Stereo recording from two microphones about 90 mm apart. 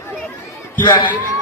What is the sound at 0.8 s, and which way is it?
Speech, 60° left (ahead or behind).